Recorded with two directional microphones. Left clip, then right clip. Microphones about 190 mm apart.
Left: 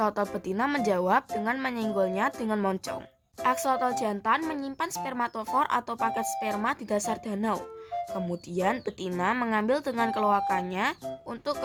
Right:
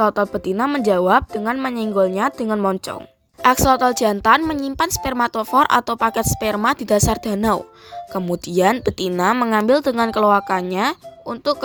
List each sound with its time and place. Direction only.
0.0 s speech: 25° right (ahead or behind)
3.4 s a woman's voice: 40° right (ahead or behind)